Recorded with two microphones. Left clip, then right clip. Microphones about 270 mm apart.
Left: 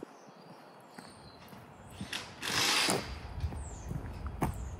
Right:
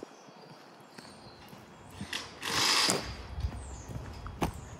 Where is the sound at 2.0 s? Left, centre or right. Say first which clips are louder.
Right 2 dB; centre.